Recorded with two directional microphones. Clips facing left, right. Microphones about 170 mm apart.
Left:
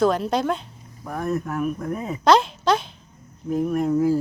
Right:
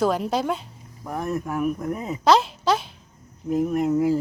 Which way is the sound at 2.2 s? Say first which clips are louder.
Left 1 dB; 5° right (ahead or behind).